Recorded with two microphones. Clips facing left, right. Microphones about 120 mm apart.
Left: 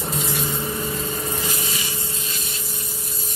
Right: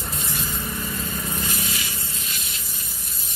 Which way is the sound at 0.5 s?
25° left (ahead or behind).